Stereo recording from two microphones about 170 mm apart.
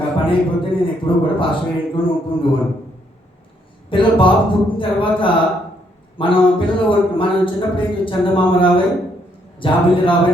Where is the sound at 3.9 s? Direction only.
30° left (ahead or behind).